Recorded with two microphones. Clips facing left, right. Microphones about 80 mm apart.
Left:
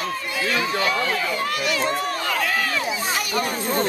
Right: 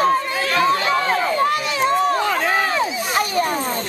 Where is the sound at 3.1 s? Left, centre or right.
Right.